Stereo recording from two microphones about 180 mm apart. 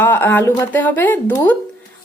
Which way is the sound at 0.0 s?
10° left (ahead or behind).